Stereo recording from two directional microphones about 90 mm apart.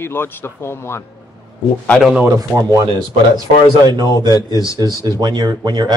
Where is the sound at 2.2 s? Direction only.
40° right (ahead or behind).